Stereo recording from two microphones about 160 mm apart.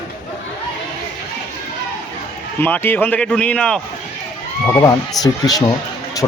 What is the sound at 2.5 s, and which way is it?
A man's voice, 10° left (ahead or behind).